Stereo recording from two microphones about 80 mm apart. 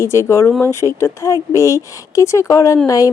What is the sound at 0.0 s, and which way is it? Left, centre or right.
A woman's voice, left.